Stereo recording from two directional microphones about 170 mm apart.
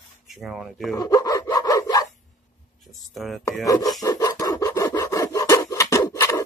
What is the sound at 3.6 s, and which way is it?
Rub, 20° left (ahead or behind).